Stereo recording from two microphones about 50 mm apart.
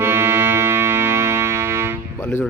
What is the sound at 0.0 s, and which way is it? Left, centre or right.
Music, right.